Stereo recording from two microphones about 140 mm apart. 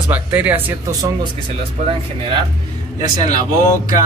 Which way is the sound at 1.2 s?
40° right (ahead or behind).